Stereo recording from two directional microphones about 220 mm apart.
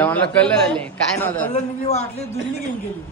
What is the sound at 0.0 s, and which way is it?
A man's voice, 5° left (ahead or behind).